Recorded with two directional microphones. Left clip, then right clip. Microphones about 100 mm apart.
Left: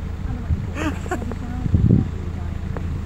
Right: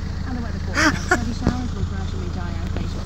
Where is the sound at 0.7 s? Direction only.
20° right (ahead or behind).